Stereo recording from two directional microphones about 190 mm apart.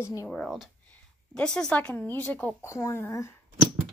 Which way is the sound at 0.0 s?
15° left (ahead or behind).